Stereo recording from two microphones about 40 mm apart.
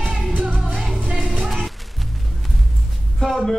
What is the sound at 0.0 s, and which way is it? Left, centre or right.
Music, right.